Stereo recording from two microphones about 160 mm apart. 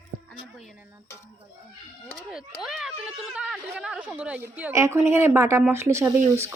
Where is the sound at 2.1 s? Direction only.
5° right (ahead or behind).